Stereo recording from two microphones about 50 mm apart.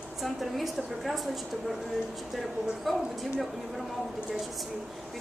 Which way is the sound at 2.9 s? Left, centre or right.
Centre.